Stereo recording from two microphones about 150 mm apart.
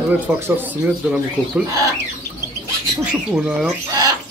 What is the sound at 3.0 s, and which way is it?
Speech, 5° right (ahead or behind).